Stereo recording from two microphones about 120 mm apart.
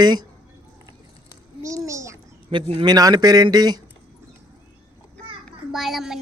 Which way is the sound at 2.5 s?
45° right (ahead or behind).